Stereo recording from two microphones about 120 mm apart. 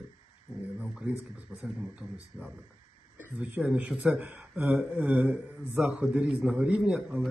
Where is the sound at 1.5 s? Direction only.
10° right (ahead or behind).